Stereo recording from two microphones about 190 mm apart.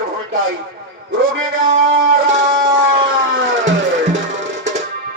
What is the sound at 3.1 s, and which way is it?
Music, 75° right (ahead or behind).